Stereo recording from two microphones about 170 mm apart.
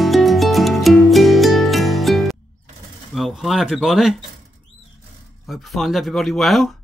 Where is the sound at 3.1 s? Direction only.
Centre (ahead or behind).